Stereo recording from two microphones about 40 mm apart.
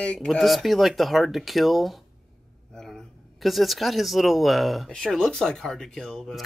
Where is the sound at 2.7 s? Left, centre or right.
Centre.